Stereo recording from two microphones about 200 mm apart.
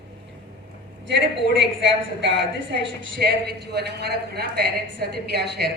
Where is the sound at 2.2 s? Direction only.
65° right (ahead or behind).